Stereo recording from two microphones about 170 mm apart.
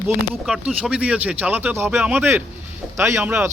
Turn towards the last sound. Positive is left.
turn(degrees=-10)  # may be behind; listen again after turning